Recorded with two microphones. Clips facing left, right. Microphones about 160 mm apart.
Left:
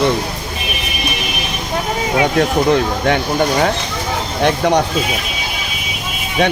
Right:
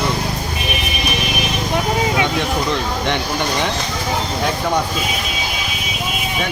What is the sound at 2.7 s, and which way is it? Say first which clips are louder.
Speech: left 6 dB; 50° left (ahead or behind).